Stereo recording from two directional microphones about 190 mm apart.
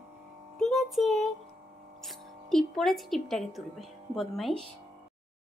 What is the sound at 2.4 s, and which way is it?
A woman's voice, centre (ahead or behind).